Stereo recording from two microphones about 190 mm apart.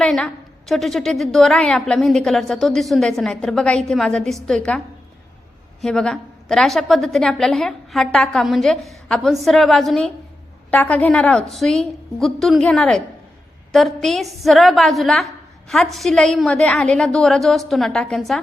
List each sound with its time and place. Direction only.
0.0 s a woman's voice: 5° left (ahead or behind)
5.8 s a woman's voice: 5° left (ahead or behind)